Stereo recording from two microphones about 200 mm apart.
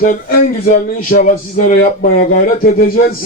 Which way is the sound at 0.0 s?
45° left (ahead or behind).